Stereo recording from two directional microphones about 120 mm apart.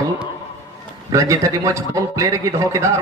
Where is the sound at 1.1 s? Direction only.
25° right (ahead or behind).